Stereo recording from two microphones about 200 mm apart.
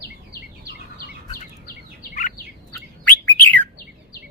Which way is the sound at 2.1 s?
40° left (ahead or behind).